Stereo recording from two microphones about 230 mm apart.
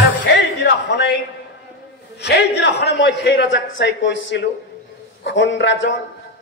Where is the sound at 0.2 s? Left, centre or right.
Left.